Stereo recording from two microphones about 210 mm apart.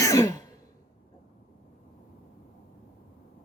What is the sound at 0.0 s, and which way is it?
Sigh, 15° left (ahead or behind).